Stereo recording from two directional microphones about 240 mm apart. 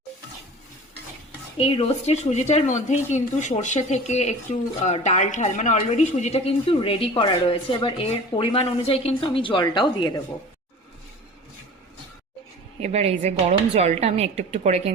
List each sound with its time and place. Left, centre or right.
1.5 s a woman's voice: left
12.8 s a woman's voice: right